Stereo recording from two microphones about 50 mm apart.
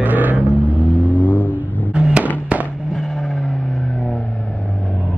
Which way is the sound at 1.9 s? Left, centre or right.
Right.